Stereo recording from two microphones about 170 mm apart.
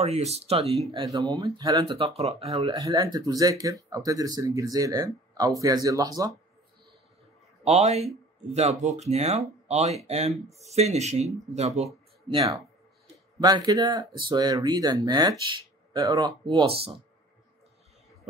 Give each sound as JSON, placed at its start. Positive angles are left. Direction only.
{"t": 0.0, "sound": "speech", "side_deg": -40}
{"t": 0.9, "sound": "speech", "side_deg": -20}
{"t": 2.0, "sound": "speech", "side_deg": -35}
{"t": 2.7, "sound": "speech", "side_deg": -20}
{"t": 7.6, "sound": "speech", "side_deg": -40}
{"t": 13.4, "sound": "speech", "side_deg": -25}
{"t": 16.4, "sound": "speech", "side_deg": -35}